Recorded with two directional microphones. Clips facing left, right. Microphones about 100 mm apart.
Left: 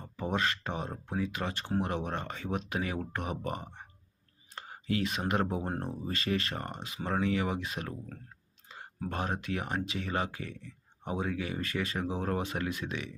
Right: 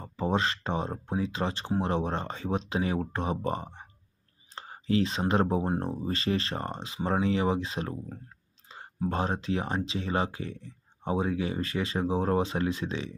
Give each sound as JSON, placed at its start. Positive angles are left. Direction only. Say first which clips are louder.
{"t": 0.0, "sound": "speech", "louder": "right 4 dB", "side_deg": -25}
{"t": 4.5, "sound": "a sound", "louder": "right 6 dB", "side_deg": -30}
{"t": 5.3, "sound": "speech", "louder": "right 6 dB", "side_deg": -25}
{"t": 9.0, "sound": "speech", "louder": "right 5 dB", "side_deg": -25}